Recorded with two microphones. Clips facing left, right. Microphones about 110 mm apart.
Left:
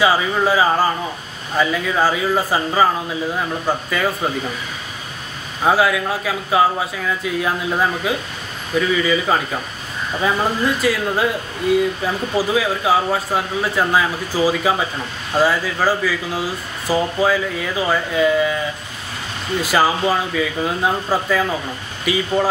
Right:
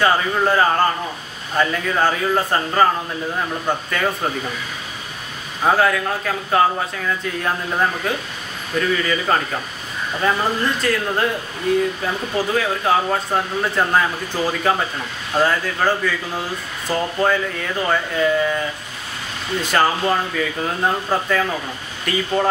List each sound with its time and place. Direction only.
0.0 s speech: 5° left (ahead or behind)
5.6 s speech: 5° left (ahead or behind)
19.6 s speech: 5° left (ahead or behind)